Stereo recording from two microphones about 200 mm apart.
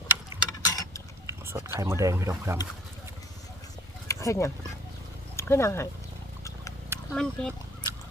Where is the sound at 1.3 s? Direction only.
15° right (ahead or behind).